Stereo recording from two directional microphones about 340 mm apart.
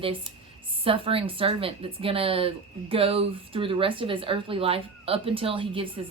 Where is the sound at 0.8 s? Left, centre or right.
Centre.